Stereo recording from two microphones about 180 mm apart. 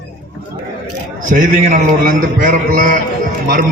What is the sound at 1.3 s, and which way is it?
A man's voice, 45° right (ahead or behind).